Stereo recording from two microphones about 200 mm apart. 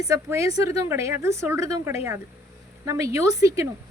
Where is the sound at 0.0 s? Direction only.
15° right (ahead or behind).